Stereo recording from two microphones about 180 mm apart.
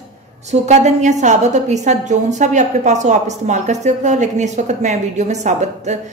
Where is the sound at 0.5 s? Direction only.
40° right (ahead or behind).